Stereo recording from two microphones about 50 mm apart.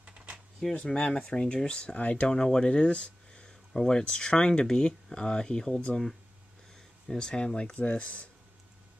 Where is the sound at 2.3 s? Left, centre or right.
Centre.